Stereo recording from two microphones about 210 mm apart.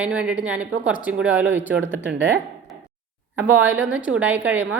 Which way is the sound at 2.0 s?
55° right (ahead or behind).